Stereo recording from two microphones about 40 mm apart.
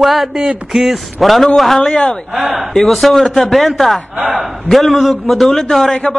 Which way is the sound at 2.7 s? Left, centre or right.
Centre.